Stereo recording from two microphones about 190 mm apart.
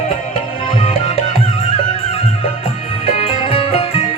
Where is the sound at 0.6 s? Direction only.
30° left (ahead or behind).